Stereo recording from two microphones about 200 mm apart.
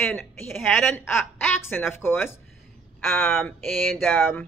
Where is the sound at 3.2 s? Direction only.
Centre (ahead or behind).